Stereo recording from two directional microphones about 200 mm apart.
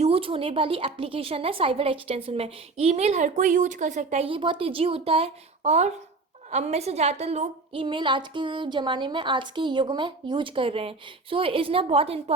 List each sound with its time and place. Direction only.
0.0 s a woman's voice: 25° right (ahead or behind)